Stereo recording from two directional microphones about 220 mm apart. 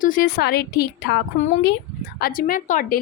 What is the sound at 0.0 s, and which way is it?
A woman's voice, 40° left (ahead or behind).